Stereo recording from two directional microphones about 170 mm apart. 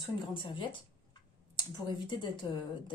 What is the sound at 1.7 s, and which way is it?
Speech, 25° left (ahead or behind).